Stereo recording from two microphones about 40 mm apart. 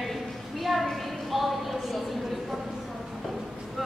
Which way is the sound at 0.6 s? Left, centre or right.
Centre.